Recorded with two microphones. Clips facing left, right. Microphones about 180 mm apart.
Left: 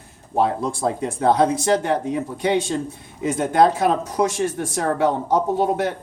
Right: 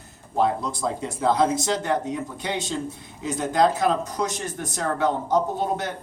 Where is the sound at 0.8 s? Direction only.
65° left (ahead or behind).